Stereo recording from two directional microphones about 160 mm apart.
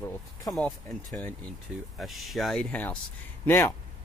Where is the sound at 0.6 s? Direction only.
5° left (ahead or behind).